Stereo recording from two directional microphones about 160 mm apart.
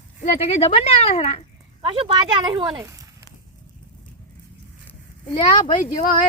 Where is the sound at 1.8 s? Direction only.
30° right (ahead or behind).